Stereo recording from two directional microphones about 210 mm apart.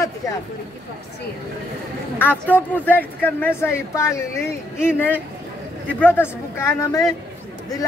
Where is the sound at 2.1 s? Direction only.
10° left (ahead or behind).